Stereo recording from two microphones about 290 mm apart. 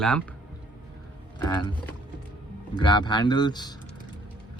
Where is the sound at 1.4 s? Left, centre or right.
Centre.